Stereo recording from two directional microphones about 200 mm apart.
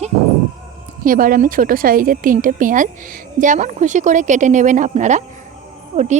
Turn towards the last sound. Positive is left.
turn(degrees=-35)  # may be behind; listen again after turning